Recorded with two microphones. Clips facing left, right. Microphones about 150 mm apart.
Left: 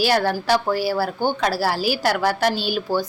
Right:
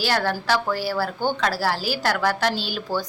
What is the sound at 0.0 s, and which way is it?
Speech, 15° left (ahead or behind).